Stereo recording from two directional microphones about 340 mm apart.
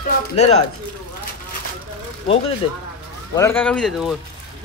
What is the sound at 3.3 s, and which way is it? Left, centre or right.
Speech, centre.